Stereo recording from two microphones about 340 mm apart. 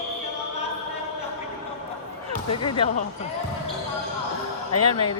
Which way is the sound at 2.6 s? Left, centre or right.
Centre.